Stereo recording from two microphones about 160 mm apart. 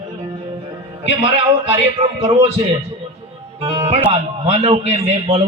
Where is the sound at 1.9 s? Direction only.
35° right (ahead or behind).